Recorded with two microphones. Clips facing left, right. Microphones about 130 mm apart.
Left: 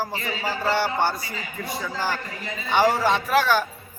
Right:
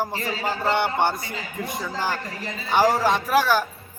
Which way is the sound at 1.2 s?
55° right (ahead or behind).